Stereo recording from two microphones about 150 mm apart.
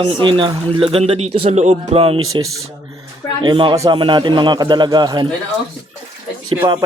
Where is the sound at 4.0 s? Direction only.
30° right (ahead or behind).